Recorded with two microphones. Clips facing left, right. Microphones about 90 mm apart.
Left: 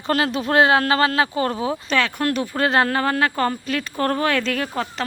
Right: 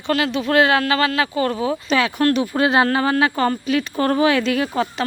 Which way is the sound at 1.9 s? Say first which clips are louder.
Right 4 dB; 5° right (ahead or behind).